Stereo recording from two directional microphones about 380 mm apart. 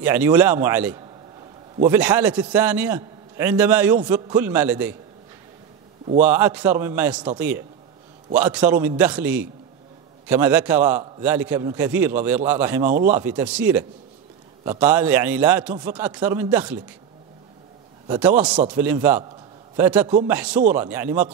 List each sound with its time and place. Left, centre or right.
0.0 s a man's voice: centre
6.2 s a man's voice: centre
12.8 s speech: centre
13.1 s a man's voice: centre
18.0 s a man's voice: centre